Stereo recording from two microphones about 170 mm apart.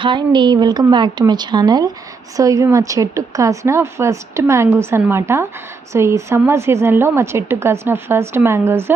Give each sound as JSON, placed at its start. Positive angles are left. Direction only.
{"t": 0.0, "sound": "a woman's voice", "side_deg": -30}